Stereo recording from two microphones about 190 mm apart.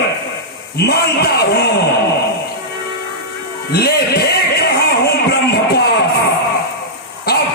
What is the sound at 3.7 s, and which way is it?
Music, 55° left (ahead or behind).